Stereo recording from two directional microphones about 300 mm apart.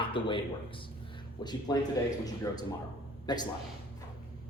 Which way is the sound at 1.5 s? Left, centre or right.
Centre.